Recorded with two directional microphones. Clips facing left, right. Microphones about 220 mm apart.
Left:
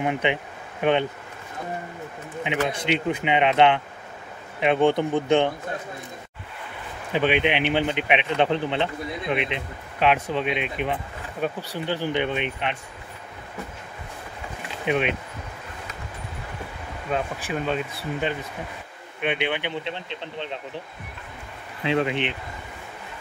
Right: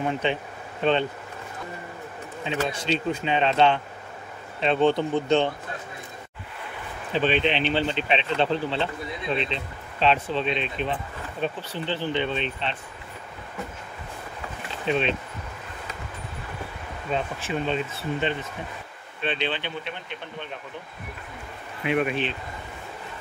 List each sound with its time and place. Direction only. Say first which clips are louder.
0.0 s speech: left 2 dB; 15° left (ahead or behind)
2.4 s speech: left 2 dB; 15° left (ahead or behind)
7.1 s speech: left 1 dB; 15° left (ahead or behind)
14.9 s speech: left 1 dB; 15° left (ahead or behind)
17.1 s speech: left 1 dB; 5° left (ahead or behind); by 20.4 s 25° left (ahead or behind)
21.8 s speech: left 1 dB; 20° left (ahead or behind)